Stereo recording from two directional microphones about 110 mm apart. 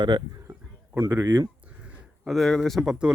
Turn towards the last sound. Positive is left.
turn(degrees=-5)  # may be behind; listen again after turning